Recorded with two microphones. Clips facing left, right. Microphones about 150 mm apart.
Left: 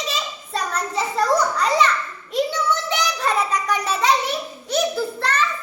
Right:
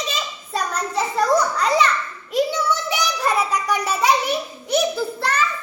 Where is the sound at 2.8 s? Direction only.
10° right (ahead or behind).